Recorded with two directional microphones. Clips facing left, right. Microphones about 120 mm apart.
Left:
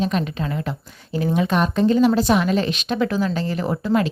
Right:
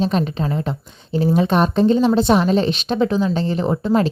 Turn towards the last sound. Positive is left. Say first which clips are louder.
# right 3 dB
turn(degrees=-30)  # may be behind; listen again after turning